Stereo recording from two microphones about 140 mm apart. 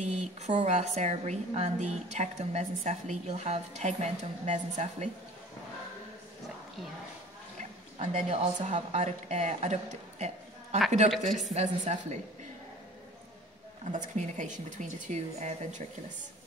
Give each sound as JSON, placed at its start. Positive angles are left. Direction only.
{"t": 0.0, "sound": "a sound", "side_deg": -55}
{"t": 0.6, "sound": "a woman's voice", "side_deg": -55}
{"t": 8.0, "sound": "a woman's voice", "side_deg": -50}
{"t": 13.9, "sound": "a woman's voice", "side_deg": -60}